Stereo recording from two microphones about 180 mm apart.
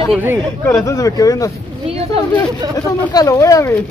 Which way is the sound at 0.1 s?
10° right (ahead or behind).